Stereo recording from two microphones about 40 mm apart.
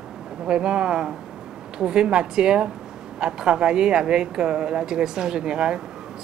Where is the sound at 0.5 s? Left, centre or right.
Right.